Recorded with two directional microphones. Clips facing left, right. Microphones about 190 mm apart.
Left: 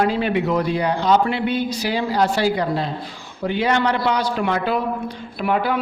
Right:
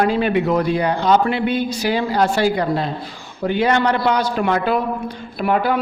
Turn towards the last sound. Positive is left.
turn(degrees=-45)  # may be behind; listen again after turning